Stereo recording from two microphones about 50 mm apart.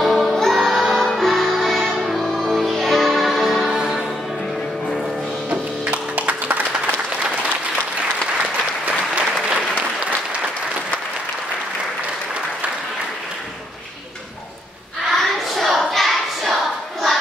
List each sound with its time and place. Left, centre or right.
0.0 s music: centre
5.9 s music: right
8.4 s applause: right
15.0 s a sound: centre
15.8 s clapping: centre